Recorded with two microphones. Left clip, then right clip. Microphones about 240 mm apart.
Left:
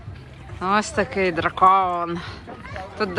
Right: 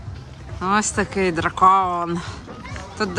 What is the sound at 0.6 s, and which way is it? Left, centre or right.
Speech, centre.